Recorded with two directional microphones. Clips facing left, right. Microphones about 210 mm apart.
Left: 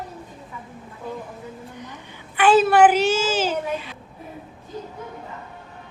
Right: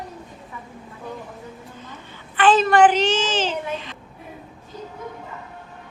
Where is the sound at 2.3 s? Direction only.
10° left (ahead or behind).